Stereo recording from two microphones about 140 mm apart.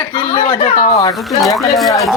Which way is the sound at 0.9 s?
25° left (ahead or behind).